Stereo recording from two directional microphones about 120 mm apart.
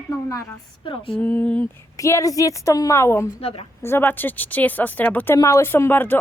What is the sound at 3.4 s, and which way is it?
Speech, 55° left (ahead or behind).